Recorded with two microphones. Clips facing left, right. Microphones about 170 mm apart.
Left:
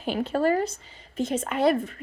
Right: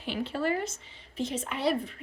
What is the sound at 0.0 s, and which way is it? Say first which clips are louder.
A woman's voice: left 6 dB; 45° left (ahead or behind).